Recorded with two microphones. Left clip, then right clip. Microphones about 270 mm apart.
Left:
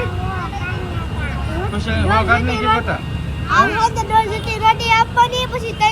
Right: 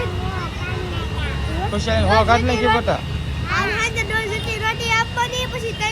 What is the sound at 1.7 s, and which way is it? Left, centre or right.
Speech, centre.